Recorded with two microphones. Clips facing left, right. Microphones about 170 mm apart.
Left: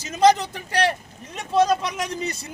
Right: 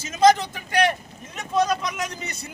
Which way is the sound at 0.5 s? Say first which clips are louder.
Right 1 dB; 35° left (ahead or behind).